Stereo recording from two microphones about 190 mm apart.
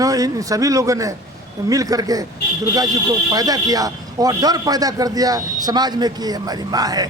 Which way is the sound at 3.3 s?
20° right (ahead or behind).